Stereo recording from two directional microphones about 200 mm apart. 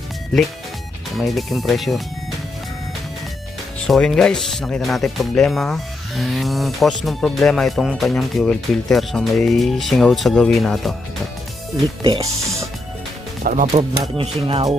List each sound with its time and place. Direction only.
1.1 s speech: centre (ahead or behind)
3.8 s speech: centre (ahead or behind)
13.4 s speech: 40° right (ahead or behind)
14.2 s speech: 25° right (ahead or behind)